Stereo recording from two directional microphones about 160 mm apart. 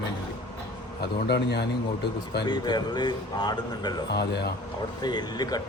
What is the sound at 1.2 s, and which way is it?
Speech, 90° left.